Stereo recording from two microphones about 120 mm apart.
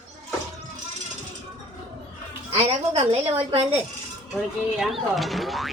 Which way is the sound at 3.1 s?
55° right (ahead or behind).